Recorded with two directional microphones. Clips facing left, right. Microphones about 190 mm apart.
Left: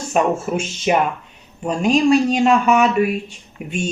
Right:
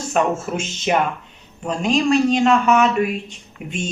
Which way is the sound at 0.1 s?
10° left (ahead or behind).